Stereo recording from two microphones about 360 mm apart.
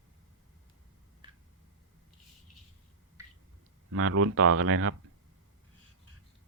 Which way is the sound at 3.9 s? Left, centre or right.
Right.